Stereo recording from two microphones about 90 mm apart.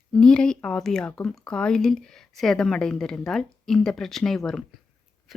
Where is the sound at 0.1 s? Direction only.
10° left (ahead or behind).